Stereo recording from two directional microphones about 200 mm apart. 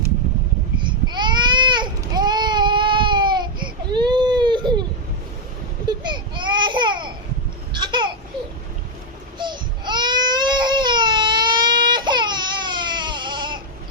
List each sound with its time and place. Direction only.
0.8 s baby cry: 25° right (ahead or behind)
6.0 s a sound: 20° right (ahead or behind)
9.4 s baby cry: 20° right (ahead or behind)